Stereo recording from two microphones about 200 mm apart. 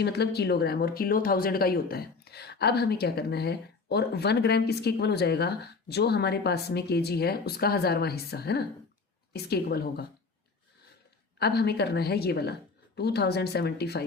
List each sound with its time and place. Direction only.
0.0 s speech: 55° left (ahead or behind)
11.3 s speech: 55° left (ahead or behind)